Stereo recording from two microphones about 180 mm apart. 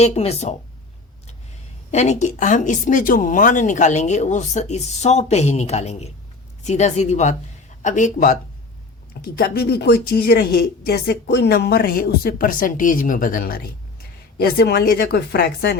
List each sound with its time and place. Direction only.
0.0 s speech: 35° left (ahead or behind)
1.9 s speech: 40° left (ahead or behind)
9.3 s speech: 60° left (ahead or behind)